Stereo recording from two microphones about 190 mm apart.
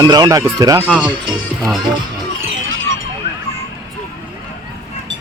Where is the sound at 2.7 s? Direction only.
90° right.